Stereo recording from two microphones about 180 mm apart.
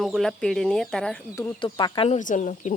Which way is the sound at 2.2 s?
45° left (ahead or behind).